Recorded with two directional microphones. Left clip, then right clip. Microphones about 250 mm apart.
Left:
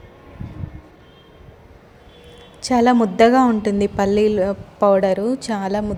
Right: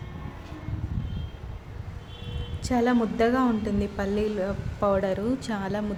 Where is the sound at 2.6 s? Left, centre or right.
Left.